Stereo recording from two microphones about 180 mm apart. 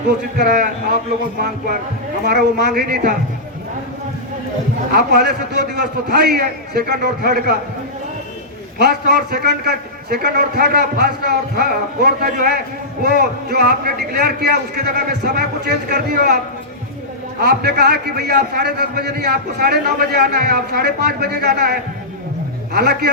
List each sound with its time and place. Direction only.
0.3 s a man's voice: 60° right (ahead or behind)
2.2 s a man's voice: 65° right (ahead or behind)
4.9 s a man's voice: 60° right (ahead or behind)
8.8 s a man's voice: 60° right (ahead or behind)
17.4 s a man's voice: 60° right (ahead or behind)